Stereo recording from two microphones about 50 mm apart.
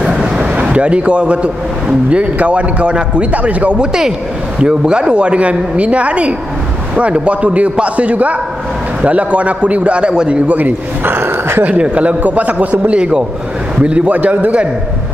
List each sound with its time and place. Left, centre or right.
0.0 s vehicle: centre
0.6 s a man's voice: right
10.6 s speech: right
11.6 s a man's voice: right